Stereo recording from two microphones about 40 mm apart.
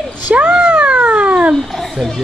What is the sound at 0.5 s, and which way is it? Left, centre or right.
Cat, right.